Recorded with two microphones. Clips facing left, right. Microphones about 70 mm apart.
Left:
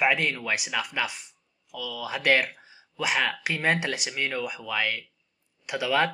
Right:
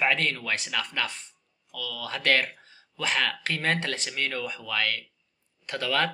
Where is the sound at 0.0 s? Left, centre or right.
Centre.